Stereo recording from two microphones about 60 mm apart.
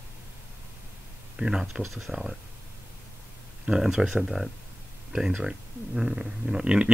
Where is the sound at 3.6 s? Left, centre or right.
Centre.